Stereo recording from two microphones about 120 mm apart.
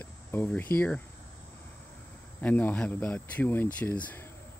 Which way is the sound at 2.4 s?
10° left (ahead or behind).